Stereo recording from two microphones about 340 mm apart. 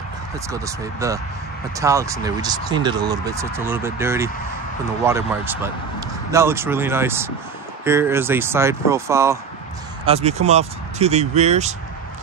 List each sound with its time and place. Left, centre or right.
0.5 s speech: centre
10.0 s speech: centre